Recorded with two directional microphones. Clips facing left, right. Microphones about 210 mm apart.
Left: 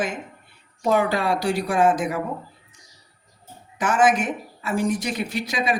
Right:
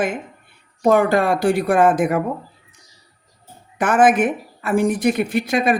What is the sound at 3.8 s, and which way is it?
A woman's voice, 55° right (ahead or behind).